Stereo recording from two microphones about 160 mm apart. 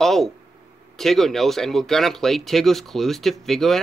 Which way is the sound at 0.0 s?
Centre (ahead or behind).